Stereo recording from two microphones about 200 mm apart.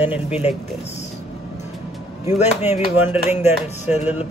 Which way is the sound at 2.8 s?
10° right (ahead or behind).